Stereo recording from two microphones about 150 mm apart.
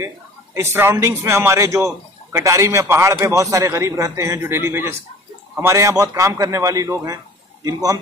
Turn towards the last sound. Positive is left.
turn(degrees=-25)  # may be behind; listen again after turning